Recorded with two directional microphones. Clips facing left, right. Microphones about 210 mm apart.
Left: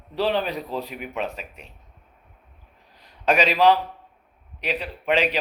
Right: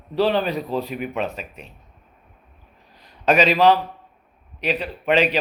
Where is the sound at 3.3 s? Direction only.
15° left (ahead or behind).